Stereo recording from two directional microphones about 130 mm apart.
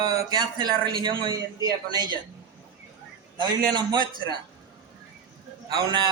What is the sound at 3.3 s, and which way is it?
A man's voice, 35° right (ahead or behind).